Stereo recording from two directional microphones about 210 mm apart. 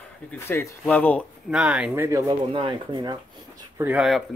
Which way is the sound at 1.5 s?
5° right (ahead or behind).